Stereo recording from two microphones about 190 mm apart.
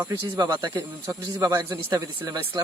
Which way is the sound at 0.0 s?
15° right (ahead or behind).